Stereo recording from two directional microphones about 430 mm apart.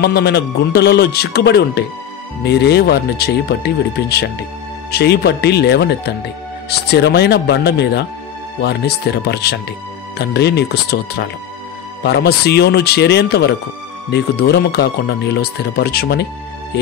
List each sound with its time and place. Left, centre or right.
0.0 s speech: left